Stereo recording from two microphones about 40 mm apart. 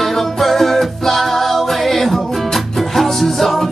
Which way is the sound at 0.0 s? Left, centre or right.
Centre.